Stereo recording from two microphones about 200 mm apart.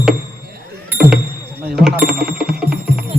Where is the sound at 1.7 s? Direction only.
5° right (ahead or behind).